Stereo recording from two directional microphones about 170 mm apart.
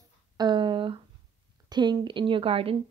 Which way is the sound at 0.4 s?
25° right (ahead or behind).